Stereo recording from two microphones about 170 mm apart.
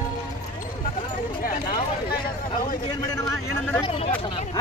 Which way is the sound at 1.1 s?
55° left (ahead or behind).